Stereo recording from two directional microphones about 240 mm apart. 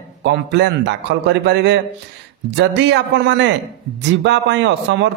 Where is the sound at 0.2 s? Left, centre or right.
Right.